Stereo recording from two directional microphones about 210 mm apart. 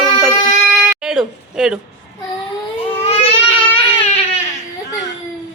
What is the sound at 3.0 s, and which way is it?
Babbling, 25° left (ahead or behind).